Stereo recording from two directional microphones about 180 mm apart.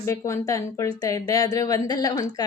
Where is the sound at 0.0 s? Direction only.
15° left (ahead or behind).